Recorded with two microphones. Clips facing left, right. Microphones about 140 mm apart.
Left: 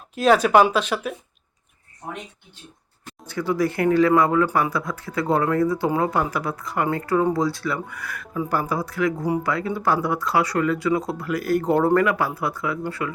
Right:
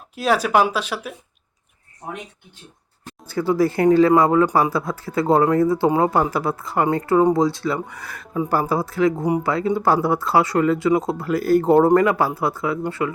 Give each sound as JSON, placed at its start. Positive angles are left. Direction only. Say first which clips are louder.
{"t": 0.2, "sound": "speech", "louder": "left 2 dB", "side_deg": -5}
{"t": 3.2, "sound": "speech", "louder": "right 4 dB", "side_deg": -30}